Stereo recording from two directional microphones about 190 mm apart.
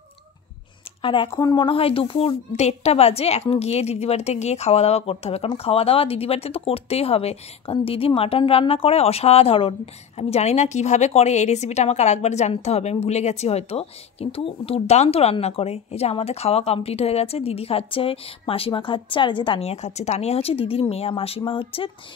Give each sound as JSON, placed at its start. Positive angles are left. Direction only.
{"t": 1.0, "sound": "a woman's voice", "side_deg": 25}